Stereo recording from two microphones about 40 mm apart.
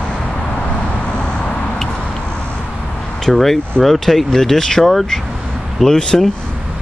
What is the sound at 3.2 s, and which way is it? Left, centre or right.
Speech, centre.